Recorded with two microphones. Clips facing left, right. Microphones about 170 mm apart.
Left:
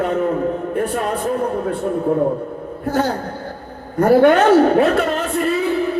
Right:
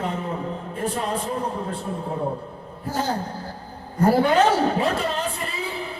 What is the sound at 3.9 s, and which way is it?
A man's voice, 70° left (ahead or behind).